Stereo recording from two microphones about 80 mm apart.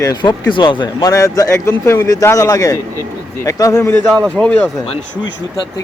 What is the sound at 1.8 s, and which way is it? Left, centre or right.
Speech, left.